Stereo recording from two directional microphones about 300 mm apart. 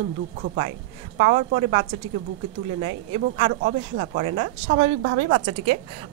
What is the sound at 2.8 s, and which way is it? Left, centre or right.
A woman's voice, centre.